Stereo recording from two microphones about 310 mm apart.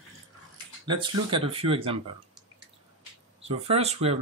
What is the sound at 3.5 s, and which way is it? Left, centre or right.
Speech, centre.